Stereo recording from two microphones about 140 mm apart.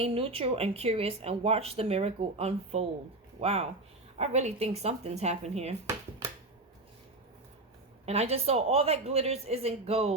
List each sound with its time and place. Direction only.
0.0 s speech: 45° right (ahead or behind)
5.8 s a sound: 20° right (ahead or behind)
8.0 s speech: 50° right (ahead or behind)